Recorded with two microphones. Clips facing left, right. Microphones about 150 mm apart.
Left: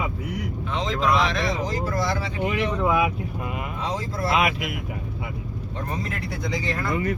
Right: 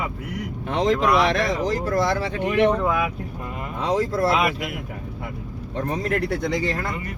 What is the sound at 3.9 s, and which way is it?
Speech, 60° right (ahead or behind).